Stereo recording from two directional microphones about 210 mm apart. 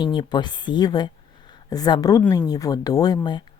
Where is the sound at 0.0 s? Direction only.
20° left (ahead or behind).